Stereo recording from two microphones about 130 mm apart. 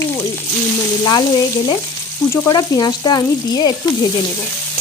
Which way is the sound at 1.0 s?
30° left (ahead or behind).